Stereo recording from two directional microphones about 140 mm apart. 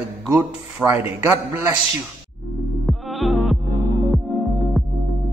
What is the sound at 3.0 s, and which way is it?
Bleat, centre (ahead or behind).